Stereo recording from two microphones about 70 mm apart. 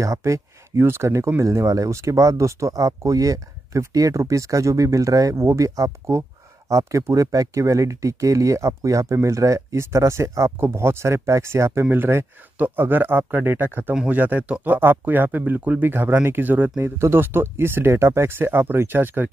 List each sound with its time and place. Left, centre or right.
0.0 s speech: right
1.4 s speech: right